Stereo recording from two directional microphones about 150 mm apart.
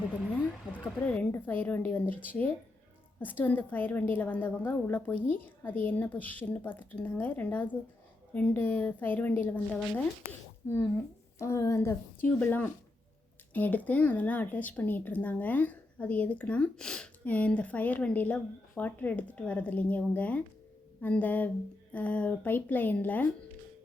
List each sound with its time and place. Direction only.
1.0 s speech: 10° left (ahead or behind)
11.3 s speech: 20° left (ahead or behind)